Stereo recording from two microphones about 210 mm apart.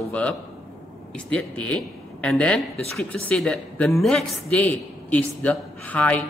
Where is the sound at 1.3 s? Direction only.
5° left (ahead or behind).